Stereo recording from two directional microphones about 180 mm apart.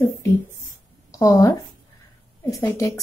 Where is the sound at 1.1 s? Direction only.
20° left (ahead or behind).